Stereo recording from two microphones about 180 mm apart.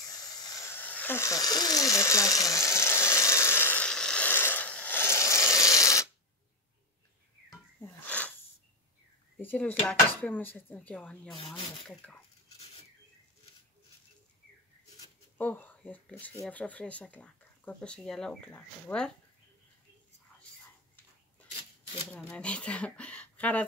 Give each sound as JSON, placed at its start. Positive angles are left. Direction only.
{"t": 0.0, "sound": "a sound", "side_deg": 15}
{"t": 7.8, "sound": "a sound", "side_deg": 10}
{"t": 9.4, "sound": "speech", "side_deg": 10}
{"t": 11.5, "sound": "rub", "side_deg": 25}
{"t": 11.8, "sound": "speech", "side_deg": 0}
{"t": 15.3, "sound": "speech", "side_deg": 10}
{"t": 22.1, "sound": "speech", "side_deg": 5}